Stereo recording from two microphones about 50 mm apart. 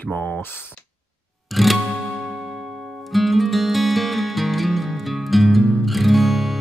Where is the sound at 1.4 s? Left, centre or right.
Centre.